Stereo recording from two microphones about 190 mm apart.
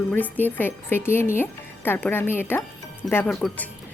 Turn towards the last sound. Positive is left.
turn(degrees=5)  # may be behind; listen again after turning